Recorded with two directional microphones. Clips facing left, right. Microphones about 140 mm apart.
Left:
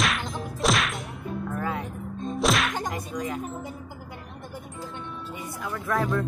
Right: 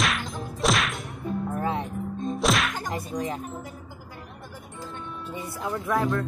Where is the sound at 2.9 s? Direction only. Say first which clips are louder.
Right 1 dB; 30° right (ahead or behind).